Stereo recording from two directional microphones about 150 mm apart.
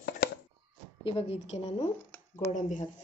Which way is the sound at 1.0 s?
40° left (ahead or behind).